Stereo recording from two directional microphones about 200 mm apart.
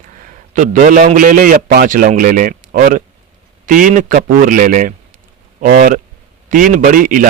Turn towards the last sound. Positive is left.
turn(degrees=-45)  # may be behind; listen again after turning